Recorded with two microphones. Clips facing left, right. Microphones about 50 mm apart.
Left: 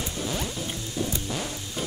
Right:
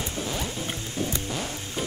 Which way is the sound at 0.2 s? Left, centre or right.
Centre.